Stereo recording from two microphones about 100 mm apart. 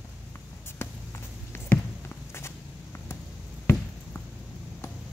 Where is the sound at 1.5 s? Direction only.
25° left (ahead or behind).